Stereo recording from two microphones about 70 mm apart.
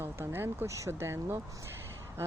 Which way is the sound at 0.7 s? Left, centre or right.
Right.